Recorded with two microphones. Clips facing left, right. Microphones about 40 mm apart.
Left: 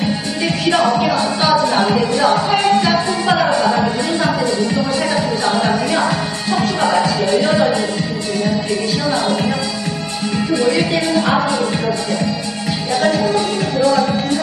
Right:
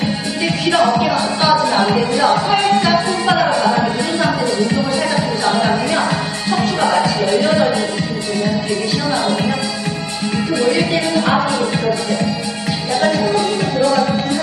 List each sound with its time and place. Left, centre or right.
0.4 s music: centre
10.3 s music: centre